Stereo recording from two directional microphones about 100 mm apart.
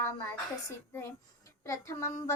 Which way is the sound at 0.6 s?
25° left (ahead or behind).